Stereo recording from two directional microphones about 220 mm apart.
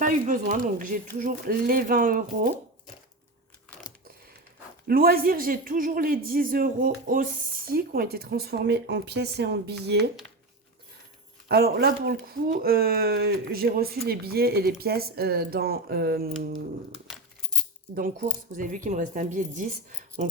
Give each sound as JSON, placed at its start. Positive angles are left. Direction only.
{"t": 0.0, "sound": "speech", "side_deg": -35}
{"t": 4.9, "sound": "speech", "side_deg": -40}
{"t": 11.4, "sound": "speech", "side_deg": -45}
{"t": 17.9, "sound": "speech", "side_deg": -40}